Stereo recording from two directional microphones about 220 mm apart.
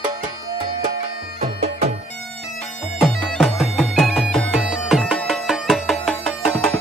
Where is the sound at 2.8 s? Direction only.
Centre (ahead or behind).